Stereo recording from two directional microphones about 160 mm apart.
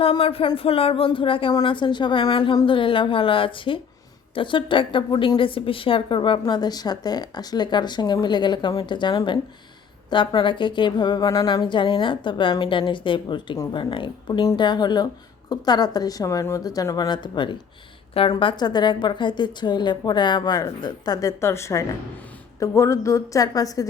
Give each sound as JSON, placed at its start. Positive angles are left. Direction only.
{"t": 0.0, "sound": "speech", "side_deg": 35}